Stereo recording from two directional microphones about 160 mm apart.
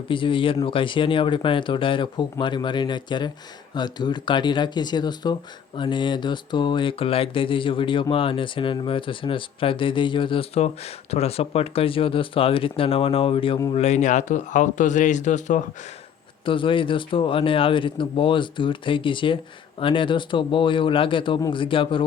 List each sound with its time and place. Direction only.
0.1 s speech: 30° left (ahead or behind)
13.7 s a man's voice: 45° left (ahead or behind)
16.5 s speech: 30° left (ahead or behind)